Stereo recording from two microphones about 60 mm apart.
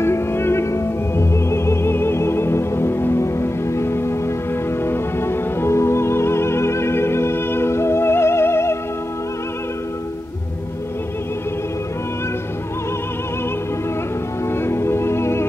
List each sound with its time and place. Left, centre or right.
0.0 s music: left
14.5 s music: left